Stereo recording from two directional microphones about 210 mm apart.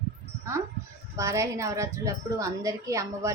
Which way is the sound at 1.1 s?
15° right (ahead or behind).